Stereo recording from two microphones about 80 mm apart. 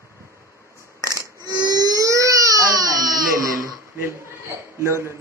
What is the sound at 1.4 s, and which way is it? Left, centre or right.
Crying, right.